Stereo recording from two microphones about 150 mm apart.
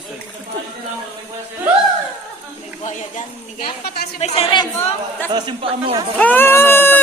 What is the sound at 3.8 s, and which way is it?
Speech, 90° left.